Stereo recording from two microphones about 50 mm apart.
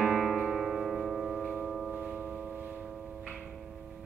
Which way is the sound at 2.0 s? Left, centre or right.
Centre.